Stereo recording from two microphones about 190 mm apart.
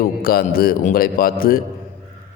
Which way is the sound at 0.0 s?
50° left (ahead or behind).